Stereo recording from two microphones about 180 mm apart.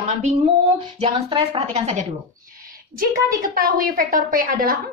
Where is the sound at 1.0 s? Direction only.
30° right (ahead or behind).